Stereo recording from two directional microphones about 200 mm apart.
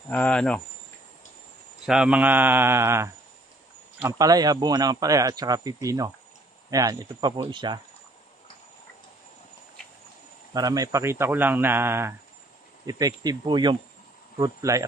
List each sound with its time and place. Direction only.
0.1 s speech: 5° left (ahead or behind)
1.9 s a man's voice: 5° right (ahead or behind); by 7.8 s 20° right (ahead or behind)
10.5 s a man's voice: 20° right (ahead or behind)